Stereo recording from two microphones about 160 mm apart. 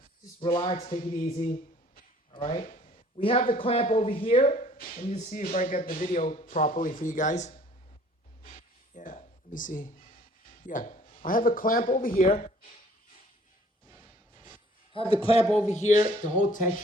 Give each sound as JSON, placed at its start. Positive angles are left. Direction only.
{"t": 0.5, "sound": "speech", "side_deg": 35}
{"t": 0.9, "sound": "speech", "side_deg": 55}
{"t": 2.3, "sound": "speech", "side_deg": 35}
{"t": 2.7, "sound": "a sound", "side_deg": 55}
{"t": 3.2, "sound": "speech", "side_deg": 35}
{"t": 4.4, "sound": "speech", "side_deg": 55}
{"t": 8.5, "sound": "a sound", "side_deg": 55}
{"t": 13.8, "sound": "music", "side_deg": -25}
{"t": 14.9, "sound": "speech", "side_deg": 35}